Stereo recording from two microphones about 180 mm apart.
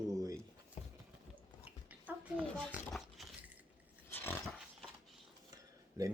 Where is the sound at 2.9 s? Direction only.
Centre (ahead or behind).